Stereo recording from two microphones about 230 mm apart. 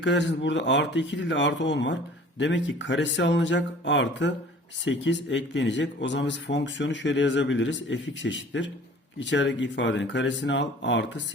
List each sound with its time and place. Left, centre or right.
0.0 s speech: left